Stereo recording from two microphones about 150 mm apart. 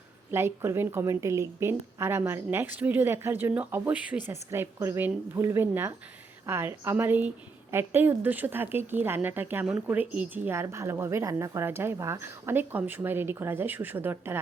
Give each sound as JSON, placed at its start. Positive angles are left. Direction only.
{"t": 0.3, "sound": "a woman's voice", "side_deg": -15}